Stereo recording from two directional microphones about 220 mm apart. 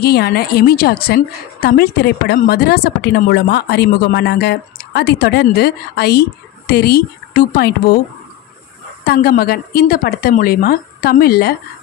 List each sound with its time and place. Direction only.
0.0 s a woman's voice: 45° left (ahead or behind)
9.0 s a woman's voice: 45° left (ahead or behind)